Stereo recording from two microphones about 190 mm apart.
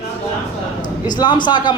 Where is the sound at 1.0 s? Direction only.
20° left (ahead or behind).